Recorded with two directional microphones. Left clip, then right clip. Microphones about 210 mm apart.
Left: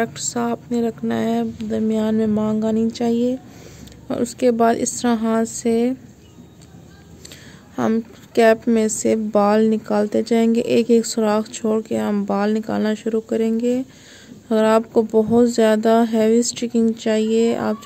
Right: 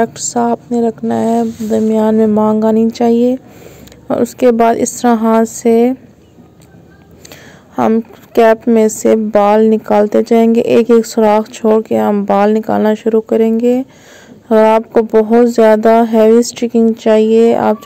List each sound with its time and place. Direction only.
0.0 s a woman's voice: 10° right (ahead or behind)
7.2 s a woman's voice: centre (ahead or behind)